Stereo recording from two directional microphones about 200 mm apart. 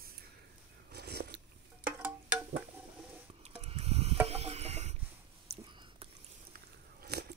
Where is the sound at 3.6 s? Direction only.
30° right (ahead or behind).